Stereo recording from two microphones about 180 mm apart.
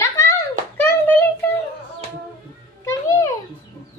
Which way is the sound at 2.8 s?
15° left (ahead or behind).